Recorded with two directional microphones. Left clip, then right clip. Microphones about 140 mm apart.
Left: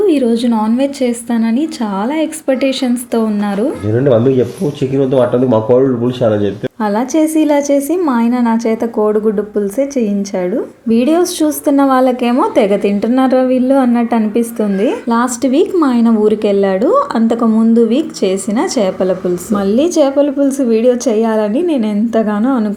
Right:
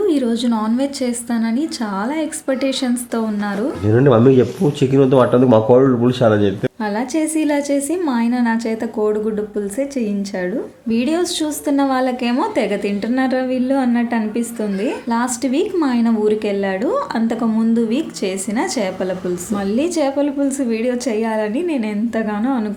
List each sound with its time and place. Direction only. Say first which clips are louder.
0.1 s a woman's voice: left 5 dB; 10° left (ahead or behind)
3.8 s speech: even; 30° right (ahead or behind)
6.8 s a woman's voice: left 8 dB; 10° left (ahead or behind)